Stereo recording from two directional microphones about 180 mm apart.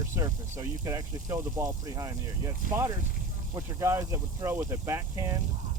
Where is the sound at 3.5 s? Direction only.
15° right (ahead or behind).